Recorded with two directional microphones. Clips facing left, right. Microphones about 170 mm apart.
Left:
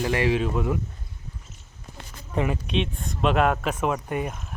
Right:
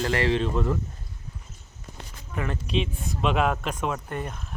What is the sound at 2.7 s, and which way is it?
Speech, centre (ahead or behind).